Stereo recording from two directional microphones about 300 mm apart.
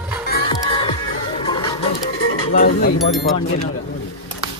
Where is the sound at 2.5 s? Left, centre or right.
Left.